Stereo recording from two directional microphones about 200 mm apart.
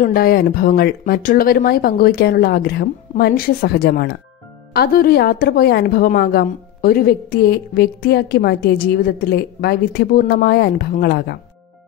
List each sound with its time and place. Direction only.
0.0 s a woman's voice: 45° left (ahead or behind)